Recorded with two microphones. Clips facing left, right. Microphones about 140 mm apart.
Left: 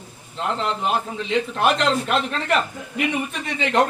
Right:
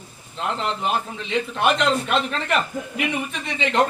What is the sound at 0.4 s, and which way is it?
A man's voice, centre (ahead or behind).